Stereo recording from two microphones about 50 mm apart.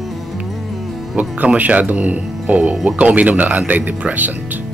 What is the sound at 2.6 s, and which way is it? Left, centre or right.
Speech, centre.